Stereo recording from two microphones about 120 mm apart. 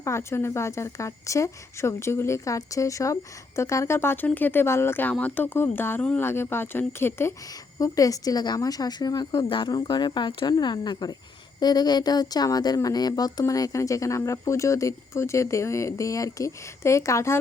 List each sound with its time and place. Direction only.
0.0 s a woman's voice: 25° left (ahead or behind)